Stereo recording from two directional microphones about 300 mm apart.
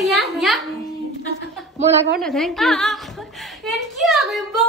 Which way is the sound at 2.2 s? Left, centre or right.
Centre.